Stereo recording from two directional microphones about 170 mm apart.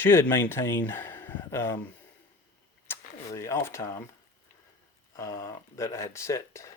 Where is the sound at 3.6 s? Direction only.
15° left (ahead or behind).